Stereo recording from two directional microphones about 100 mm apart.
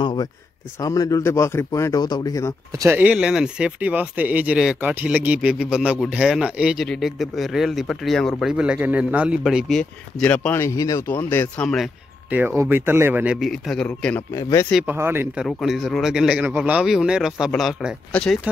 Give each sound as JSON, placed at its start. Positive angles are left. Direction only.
{"t": 0.0, "sound": "a sound", "side_deg": 55}
{"t": 0.7, "sound": "speech", "side_deg": 35}
{"t": 3.0, "sound": "a man's voice", "side_deg": -10}
{"t": 8.5, "sound": "a man's voice", "side_deg": -10}
{"t": 10.3, "sound": "speech", "side_deg": 20}
{"t": 10.6, "sound": "speech", "side_deg": 35}
{"t": 11.1, "sound": "speech", "side_deg": 20}
{"t": 12.3, "sound": "speech", "side_deg": -20}
{"t": 13.2, "sound": "speech", "side_deg": -10}
{"t": 13.8, "sound": "speech", "side_deg": 15}
{"t": 14.3, "sound": "speech", "side_deg": 30}
{"t": 14.9, "sound": "speech", "side_deg": -20}
{"t": 15.3, "sound": "a man's voice", "side_deg": -5}
{"t": 18.1, "sound": "speech", "side_deg": 10}